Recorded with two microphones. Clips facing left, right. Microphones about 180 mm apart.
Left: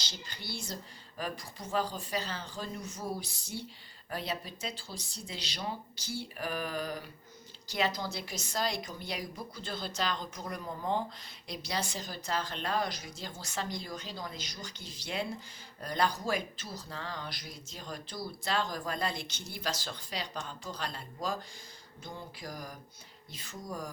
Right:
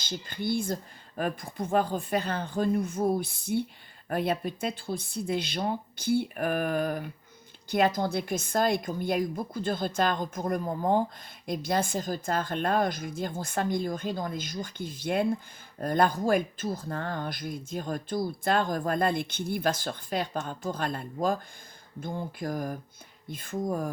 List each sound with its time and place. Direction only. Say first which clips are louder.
0.0 s speech: right 12 dB; 50° right (ahead or behind)